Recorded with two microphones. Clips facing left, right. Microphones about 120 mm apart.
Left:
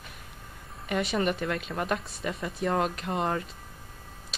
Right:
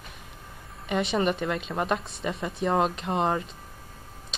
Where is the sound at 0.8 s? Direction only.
25° right (ahead or behind).